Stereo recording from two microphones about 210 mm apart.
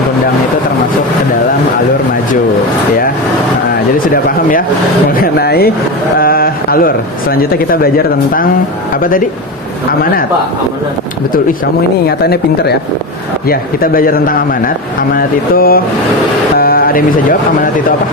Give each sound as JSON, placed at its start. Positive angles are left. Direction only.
{"t": 4.1, "sound": "speech", "side_deg": 40}
{"t": 12.0, "sound": "a man's voice", "side_deg": 50}